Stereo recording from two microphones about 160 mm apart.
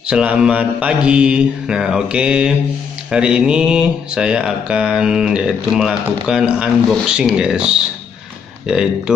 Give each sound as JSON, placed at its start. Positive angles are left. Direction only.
{"t": 0.1, "sound": "mantra", "side_deg": -5}
{"t": 3.1, "sound": "speech", "side_deg": -5}